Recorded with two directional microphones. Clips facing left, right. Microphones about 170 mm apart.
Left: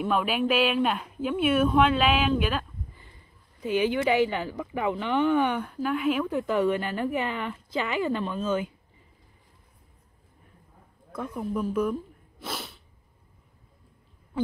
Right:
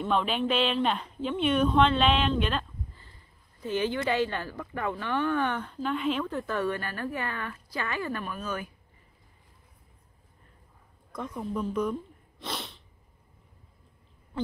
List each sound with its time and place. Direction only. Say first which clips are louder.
0.0 s speech: left 2 dB; 5° left (ahead or behind); by 8.7 s 20° left (ahead or behind)
11.1 s speech: left 3 dB; 5° left (ahead or behind)